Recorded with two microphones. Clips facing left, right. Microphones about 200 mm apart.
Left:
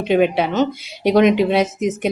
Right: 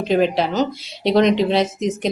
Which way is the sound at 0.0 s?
5° left (ahead or behind).